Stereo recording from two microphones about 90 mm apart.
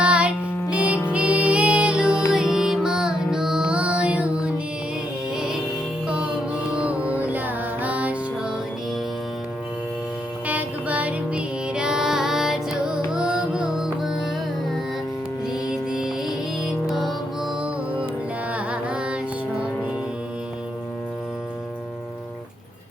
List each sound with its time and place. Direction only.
0.0 s music: 10° right (ahead or behind)
6.1 s music: 10° right (ahead or behind)
10.4 s music: 15° right (ahead or behind)
15.6 s music: 5° right (ahead or behind)
18.5 s carnatic music: 15° right (ahead or behind)